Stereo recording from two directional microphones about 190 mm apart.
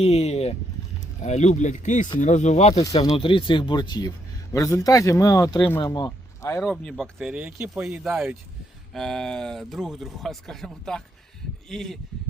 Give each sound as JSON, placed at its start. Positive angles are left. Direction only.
{"t": 0.0, "sound": "speech", "side_deg": 35}
{"t": 2.9, "sound": "speech", "side_deg": 25}
{"t": 6.7, "sound": "speech", "side_deg": 0}